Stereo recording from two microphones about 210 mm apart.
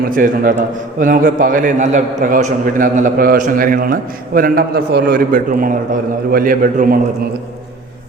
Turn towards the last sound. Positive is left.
turn(degrees=-40)  # may be behind; listen again after turning